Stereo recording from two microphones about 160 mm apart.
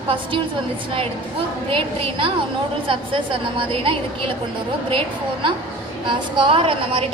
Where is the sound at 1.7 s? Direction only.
35° right (ahead or behind).